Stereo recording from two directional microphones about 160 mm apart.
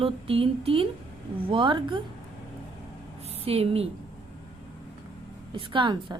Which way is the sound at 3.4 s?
40° right (ahead or behind).